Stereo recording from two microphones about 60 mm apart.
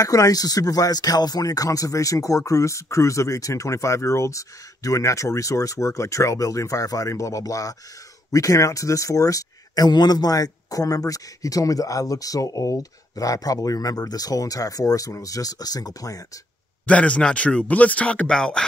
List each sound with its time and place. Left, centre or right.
0.0 s speech: left
16.8 s speech: left